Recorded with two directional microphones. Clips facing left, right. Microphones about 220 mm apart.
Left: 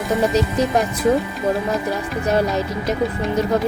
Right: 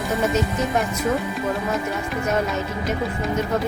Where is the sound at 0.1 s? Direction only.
30° left (ahead or behind).